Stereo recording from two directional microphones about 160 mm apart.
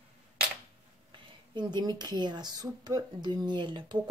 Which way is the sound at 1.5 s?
25° right (ahead or behind).